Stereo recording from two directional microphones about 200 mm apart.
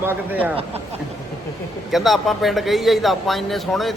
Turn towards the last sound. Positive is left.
turn(degrees=0)  # may be behind; listen again after turning